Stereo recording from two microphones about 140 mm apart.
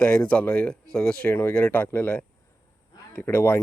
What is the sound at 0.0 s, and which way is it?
Speech, 10° left (ahead or behind).